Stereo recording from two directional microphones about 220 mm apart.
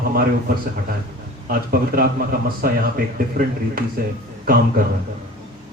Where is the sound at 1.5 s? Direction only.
40° right (ahead or behind).